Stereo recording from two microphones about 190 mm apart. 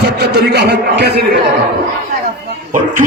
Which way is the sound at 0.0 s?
60° right (ahead or behind).